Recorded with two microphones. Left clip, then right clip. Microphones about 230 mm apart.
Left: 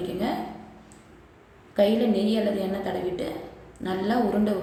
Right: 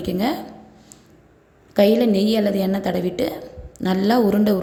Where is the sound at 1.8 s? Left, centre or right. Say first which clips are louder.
Right 6 dB; right.